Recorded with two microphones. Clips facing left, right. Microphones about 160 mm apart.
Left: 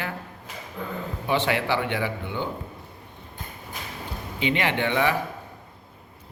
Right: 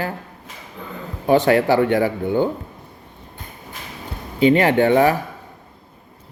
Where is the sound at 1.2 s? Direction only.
45° right (ahead or behind).